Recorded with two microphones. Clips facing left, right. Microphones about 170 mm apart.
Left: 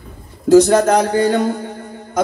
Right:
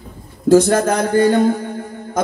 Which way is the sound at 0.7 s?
65° left (ahead or behind).